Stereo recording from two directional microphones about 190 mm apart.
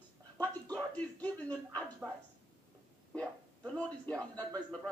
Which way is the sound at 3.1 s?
5° left (ahead or behind).